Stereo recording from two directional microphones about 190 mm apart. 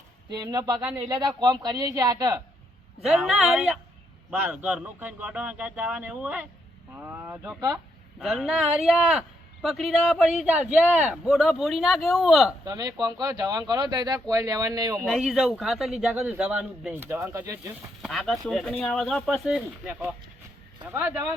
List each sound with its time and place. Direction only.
0.3 s speech: 20° right (ahead or behind)
3.0 s a man's voice: 5° right (ahead or behind)
12.6 s speech: 20° right (ahead or behind)
15.0 s a man's voice: centre (ahead or behind); by 17.6 s 15° right (ahead or behind)
18.0 s a man's voice: centre (ahead or behind)